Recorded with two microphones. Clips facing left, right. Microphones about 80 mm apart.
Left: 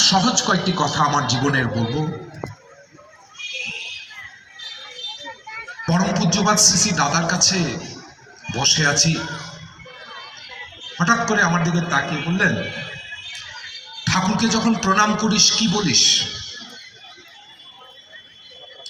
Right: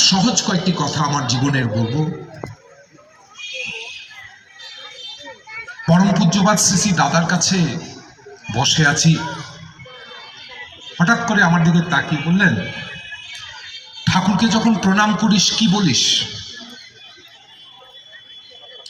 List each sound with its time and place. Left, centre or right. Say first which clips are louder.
0.0 s a man's voice: right 1 dB; left
5.9 s a man's voice: right 5 dB; centre
10.9 s a man's voice: right 2 dB; centre
14.0 s a man's voice: right 3 dB; centre